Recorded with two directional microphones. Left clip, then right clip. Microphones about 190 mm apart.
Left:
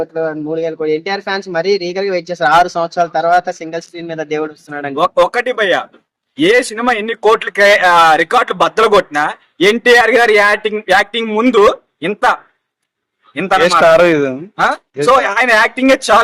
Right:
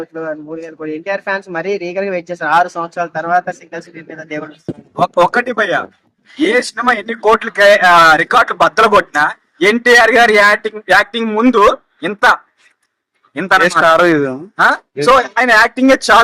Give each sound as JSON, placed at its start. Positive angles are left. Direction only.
{"t": 0.1, "sound": "speech", "side_deg": 55}
{"t": 4.9, "sound": "speech", "side_deg": 0}